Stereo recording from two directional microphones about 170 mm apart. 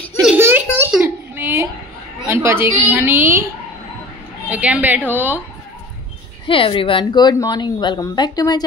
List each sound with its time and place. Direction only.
0.4 s a sound: 15° right (ahead or behind)
2.2 s a woman's voice: 15° right (ahead or behind)
4.5 s a woman's voice: 10° right (ahead or behind)
6.4 s a woman's voice: 30° left (ahead or behind)